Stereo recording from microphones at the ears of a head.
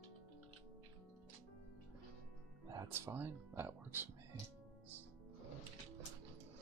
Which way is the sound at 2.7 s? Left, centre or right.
Right.